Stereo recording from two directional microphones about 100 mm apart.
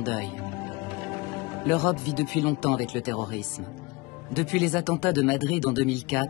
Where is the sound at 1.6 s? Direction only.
5° right (ahead or behind).